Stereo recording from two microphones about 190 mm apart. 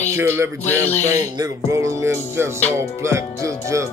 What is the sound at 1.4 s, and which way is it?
Music, 15° right (ahead or behind).